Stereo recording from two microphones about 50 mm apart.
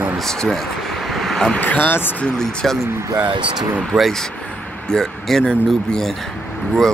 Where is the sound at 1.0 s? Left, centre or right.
Centre.